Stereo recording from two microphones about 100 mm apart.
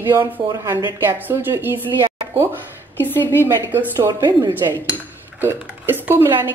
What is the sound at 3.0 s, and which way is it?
Speech, 20° left (ahead or behind).